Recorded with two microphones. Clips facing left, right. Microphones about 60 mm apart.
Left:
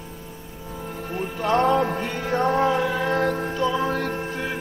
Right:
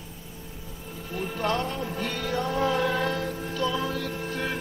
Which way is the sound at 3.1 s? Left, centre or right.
Left.